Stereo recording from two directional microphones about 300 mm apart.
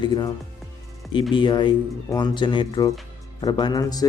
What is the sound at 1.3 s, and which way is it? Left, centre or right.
Speech, centre.